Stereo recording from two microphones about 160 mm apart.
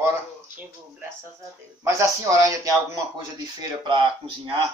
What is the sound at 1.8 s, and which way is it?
Speech, 20° right (ahead or behind).